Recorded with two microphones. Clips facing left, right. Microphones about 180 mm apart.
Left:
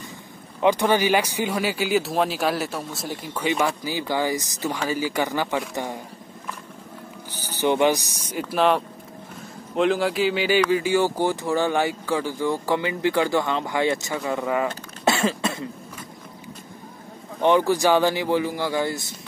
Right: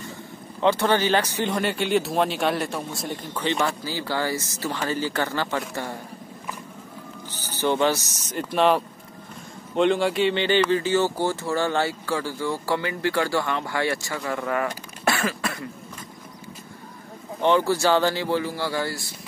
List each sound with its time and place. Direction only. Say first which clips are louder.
0.6 s speech: left 1 dB; 15° left (ahead or behind)
3.8 s speech: left 2 dB; 15° left (ahead or behind)
7.4 s speech: left 2 dB; 15° left (ahead or behind)
15.0 s cough: left 3 dB; 25° left (ahead or behind)
17.4 s speech: left 2 dB; 15° left (ahead or behind)